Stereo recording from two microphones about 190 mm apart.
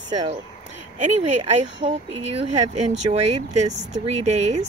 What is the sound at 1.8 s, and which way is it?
Speech, 30° right (ahead or behind).